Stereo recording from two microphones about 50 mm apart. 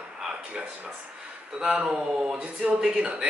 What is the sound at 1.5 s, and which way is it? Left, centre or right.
Speech, centre.